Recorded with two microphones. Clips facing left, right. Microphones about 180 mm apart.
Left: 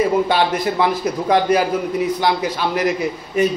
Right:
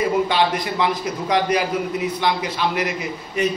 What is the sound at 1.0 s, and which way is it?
A man's voice, 45° left (ahead or behind).